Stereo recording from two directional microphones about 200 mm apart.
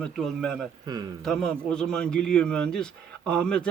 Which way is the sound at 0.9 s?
20° right (ahead or behind).